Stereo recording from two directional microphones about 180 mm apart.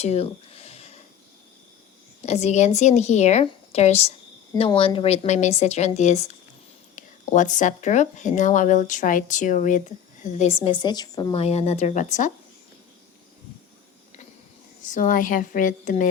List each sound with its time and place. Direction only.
0.0 s a sound: 35° left (ahead or behind)
2.2 s a woman's voice: 40° left (ahead or behind); by 11.4 s 25° left (ahead or behind)
11.4 s a woman's voice: 35° left (ahead or behind)
14.8 s speech: 45° left (ahead or behind)